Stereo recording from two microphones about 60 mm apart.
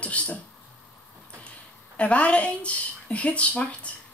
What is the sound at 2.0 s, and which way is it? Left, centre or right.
Speech, left.